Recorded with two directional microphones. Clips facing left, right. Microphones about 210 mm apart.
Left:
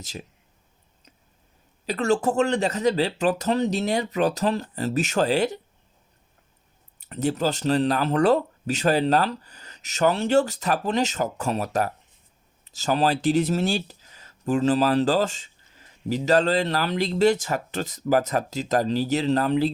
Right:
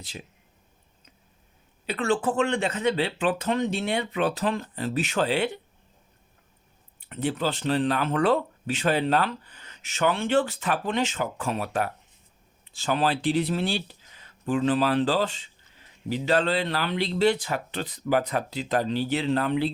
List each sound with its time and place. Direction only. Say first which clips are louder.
1.9 s speech: left 3 dB; 40° left (ahead or behind)
7.0 s speech: left 3 dB; 40° left (ahead or behind)